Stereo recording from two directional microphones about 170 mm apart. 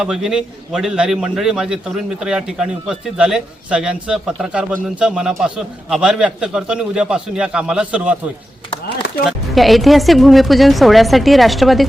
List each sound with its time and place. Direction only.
0.0 s a man's voice: 5° right (ahead or behind)
9.2 s a man's voice: centre (ahead or behind)